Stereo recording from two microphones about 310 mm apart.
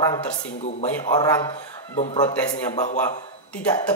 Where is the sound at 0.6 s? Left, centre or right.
Left.